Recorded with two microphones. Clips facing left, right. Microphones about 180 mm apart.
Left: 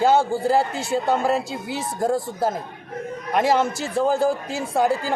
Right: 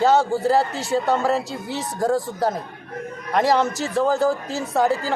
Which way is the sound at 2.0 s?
25° left (ahead or behind).